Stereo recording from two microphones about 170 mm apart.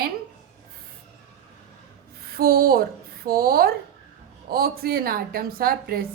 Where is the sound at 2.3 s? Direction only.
60° right (ahead or behind).